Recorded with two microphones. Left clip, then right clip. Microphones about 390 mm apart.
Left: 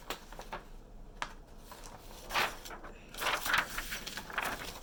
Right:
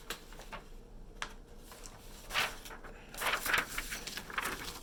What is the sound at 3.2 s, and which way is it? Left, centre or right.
Vehicle, centre.